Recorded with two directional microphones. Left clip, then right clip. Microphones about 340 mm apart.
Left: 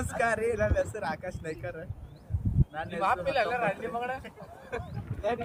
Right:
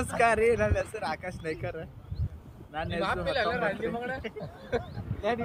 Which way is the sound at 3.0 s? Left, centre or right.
Centre.